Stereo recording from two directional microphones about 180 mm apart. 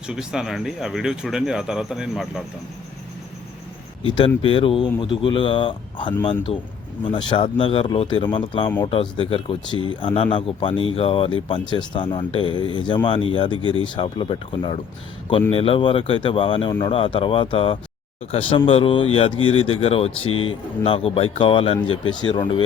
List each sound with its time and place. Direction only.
0.1 s speech: 5° right (ahead or behind)
4.4 s speech: 30° left (ahead or behind)
13.6 s speech: 25° right (ahead or behind)
13.8 s speech: 25° left (ahead or behind)